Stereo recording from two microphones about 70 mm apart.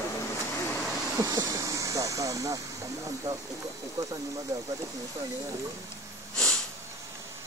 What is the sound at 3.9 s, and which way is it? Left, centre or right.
Speech, right.